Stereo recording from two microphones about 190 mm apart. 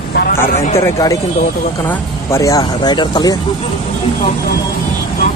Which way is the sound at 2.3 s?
15° left (ahead or behind).